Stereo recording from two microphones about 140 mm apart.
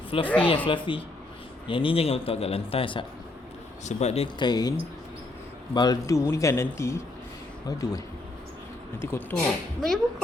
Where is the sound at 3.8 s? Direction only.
50° left (ahead or behind).